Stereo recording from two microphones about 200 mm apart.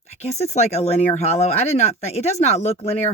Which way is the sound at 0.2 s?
35° left (ahead or behind).